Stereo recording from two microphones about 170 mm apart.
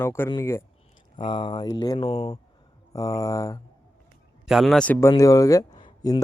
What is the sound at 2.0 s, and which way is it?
Speech, 35° left (ahead or behind).